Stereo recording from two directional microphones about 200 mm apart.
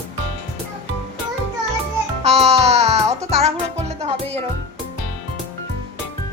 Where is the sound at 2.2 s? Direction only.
30° right (ahead or behind).